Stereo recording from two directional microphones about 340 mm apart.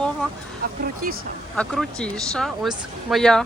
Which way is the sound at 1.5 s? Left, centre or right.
Centre.